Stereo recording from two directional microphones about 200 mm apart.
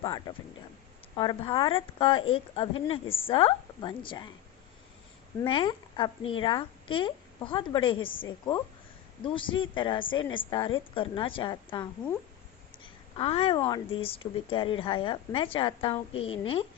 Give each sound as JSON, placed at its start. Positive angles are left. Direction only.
{"t": 0.0, "sound": "a woman's voice", "side_deg": 20}
{"t": 5.4, "sound": "a woman's voice", "side_deg": 25}
{"t": 12.8, "sound": "a sound", "side_deg": 30}
{"t": 13.6, "sound": "a woman's voice", "side_deg": 20}